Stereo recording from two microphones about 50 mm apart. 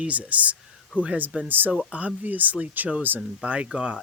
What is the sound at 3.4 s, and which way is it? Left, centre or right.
Speech, right.